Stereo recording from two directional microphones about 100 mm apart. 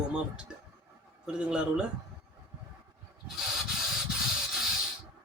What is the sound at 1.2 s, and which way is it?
Speech, 10° right (ahead or behind).